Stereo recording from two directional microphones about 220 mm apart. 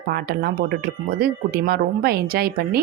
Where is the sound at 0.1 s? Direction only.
45° right (ahead or behind).